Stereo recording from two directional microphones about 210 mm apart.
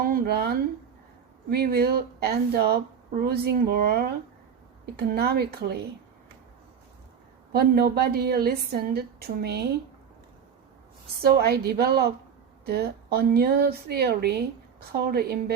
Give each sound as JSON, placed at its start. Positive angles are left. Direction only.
{"t": 0.0, "sound": "a woman's voice", "side_deg": -45}
{"t": 7.5, "sound": "a woman's voice", "side_deg": -45}
{"t": 11.2, "sound": "a woman's voice", "side_deg": -50}